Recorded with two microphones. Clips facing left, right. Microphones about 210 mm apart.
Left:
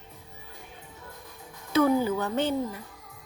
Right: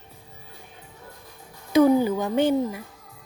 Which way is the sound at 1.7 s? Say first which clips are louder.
Right 5 dB; 15° right (ahead or behind).